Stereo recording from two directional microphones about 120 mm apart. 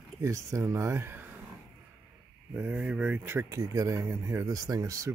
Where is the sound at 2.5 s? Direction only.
15° right (ahead or behind).